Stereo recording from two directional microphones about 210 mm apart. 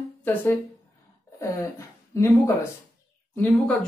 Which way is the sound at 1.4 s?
15° left (ahead or behind).